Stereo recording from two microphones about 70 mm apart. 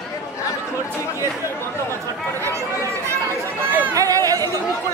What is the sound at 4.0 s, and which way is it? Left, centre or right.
Chatter, right.